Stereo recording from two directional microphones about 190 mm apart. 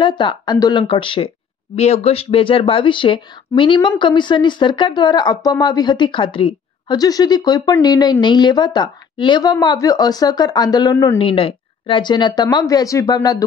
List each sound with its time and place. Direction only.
0.0 s a woman's voice: 25° left (ahead or behind)